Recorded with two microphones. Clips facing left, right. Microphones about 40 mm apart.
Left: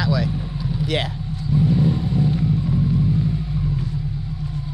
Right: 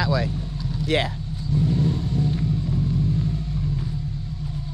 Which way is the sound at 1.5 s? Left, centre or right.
Centre.